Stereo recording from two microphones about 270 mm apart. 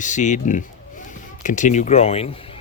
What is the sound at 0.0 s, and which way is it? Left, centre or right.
Speech, left.